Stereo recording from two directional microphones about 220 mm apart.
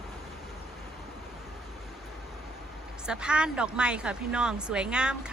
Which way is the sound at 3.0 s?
5° right (ahead or behind).